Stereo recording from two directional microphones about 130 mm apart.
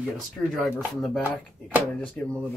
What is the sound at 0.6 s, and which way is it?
Speech, centre (ahead or behind).